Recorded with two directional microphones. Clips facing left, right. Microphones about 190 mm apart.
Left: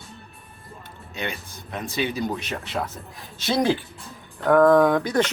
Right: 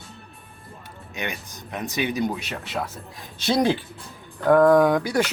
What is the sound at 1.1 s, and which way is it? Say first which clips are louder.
Speech: even; 15° right (ahead or behind).